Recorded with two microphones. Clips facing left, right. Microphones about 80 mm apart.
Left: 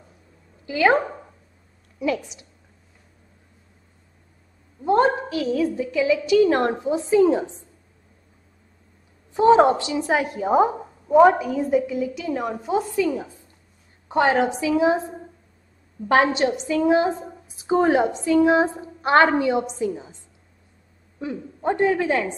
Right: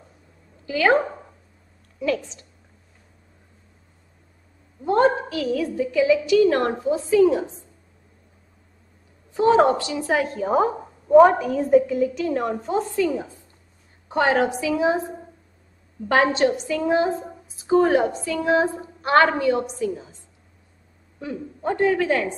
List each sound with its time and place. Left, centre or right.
0.7 s a woman's voice: left
4.8 s a woman's voice: left
9.3 s a woman's voice: left; by 13.0 s centre
13.1 s a woman's voice: right
14.3 s a woman's voice: left
16.3 s a woman's voice: left
21.2 s a woman's voice: left